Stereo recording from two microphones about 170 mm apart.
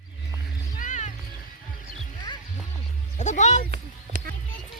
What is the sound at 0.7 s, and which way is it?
Music, 45° left (ahead or behind).